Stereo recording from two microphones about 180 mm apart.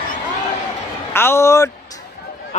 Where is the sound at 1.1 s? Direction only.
15° left (ahead or behind).